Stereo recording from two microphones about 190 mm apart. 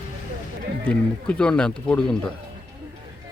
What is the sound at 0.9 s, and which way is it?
Speech, 5° left (ahead or behind).